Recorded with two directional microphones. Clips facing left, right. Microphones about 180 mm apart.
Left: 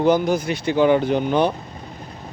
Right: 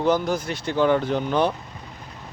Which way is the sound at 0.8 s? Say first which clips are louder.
Left 3 dB; 15° left (ahead or behind).